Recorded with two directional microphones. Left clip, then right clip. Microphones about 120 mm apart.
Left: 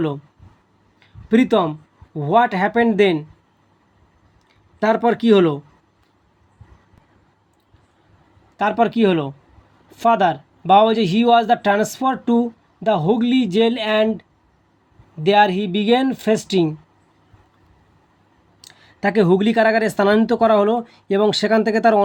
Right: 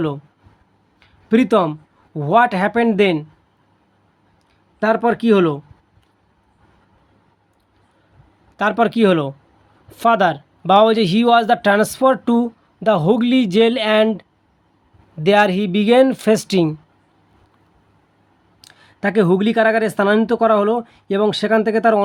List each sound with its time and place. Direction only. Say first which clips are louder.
0.9 s speech: right 1 dB; 20° right (ahead or behind)
4.8 s speech: right 1 dB; 5° right (ahead or behind)
8.5 s speech: right 1 dB; 35° right (ahead or behind)
18.6 s speech: even; 15° right (ahead or behind)